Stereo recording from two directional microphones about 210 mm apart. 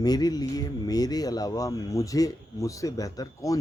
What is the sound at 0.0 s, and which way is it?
Speech, 20° left (ahead or behind).